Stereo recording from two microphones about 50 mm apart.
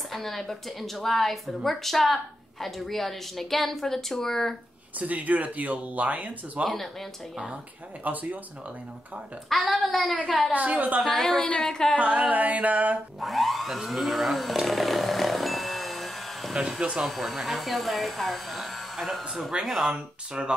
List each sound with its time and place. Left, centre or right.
0.1 s speech: centre
4.9 s speech: right
6.7 s speech: centre
8.0 s speech: right
9.5 s speech: centre
10.5 s speech: right
11.1 s a woman's voice: centre
12.0 s a sound: right
13.2 s chainsaw: centre
16.5 s speech: centre
19.8 s a sound: centre